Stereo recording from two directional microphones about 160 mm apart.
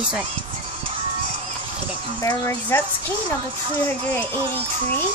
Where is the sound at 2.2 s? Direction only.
20° left (ahead or behind).